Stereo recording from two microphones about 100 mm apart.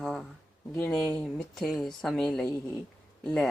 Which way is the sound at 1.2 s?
5° left (ahead or behind).